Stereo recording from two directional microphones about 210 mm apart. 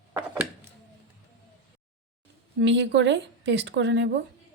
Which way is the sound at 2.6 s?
55° right (ahead or behind).